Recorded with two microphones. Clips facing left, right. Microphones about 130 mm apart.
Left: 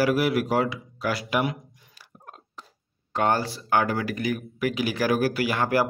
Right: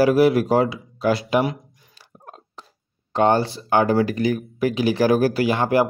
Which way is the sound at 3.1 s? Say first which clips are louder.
Right 6 dB; 25° right (ahead or behind).